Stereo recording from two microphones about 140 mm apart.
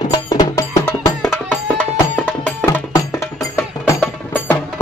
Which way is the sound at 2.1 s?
15° left (ahead or behind).